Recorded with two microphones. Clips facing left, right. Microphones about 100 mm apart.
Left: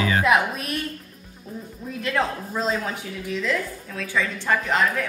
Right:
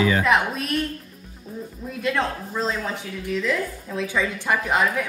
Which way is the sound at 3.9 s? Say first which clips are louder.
Right 1 dB; 15° right (ahead or behind).